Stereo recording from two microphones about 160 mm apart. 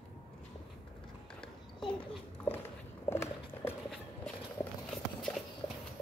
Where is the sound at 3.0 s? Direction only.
15° left (ahead or behind).